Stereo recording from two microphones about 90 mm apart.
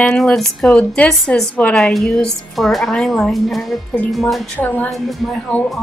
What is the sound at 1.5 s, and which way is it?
Speech, 15° left (ahead or behind).